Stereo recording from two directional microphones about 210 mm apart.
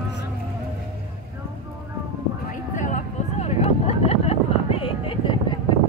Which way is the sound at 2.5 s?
35° left (ahead or behind).